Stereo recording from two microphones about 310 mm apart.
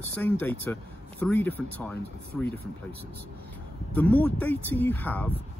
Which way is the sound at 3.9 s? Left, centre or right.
Centre.